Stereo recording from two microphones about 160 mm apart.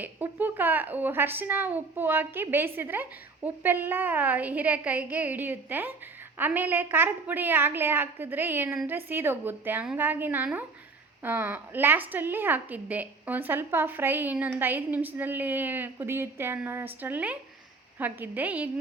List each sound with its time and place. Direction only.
0.0 s a woman's voice: 10° right (ahead or behind)